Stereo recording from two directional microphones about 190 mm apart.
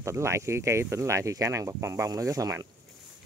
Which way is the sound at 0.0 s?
15° right (ahead or behind).